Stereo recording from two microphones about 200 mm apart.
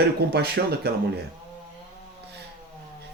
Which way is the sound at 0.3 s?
55° right (ahead or behind).